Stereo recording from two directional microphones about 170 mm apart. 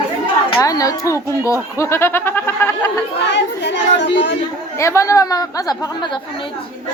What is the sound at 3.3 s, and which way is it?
Speech, 90° left.